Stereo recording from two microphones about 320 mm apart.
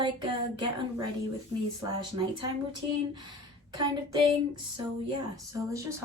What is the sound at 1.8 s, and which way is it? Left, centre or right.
Speech, centre.